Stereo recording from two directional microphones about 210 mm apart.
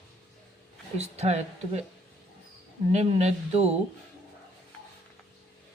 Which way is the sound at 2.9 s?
30° right (ahead or behind).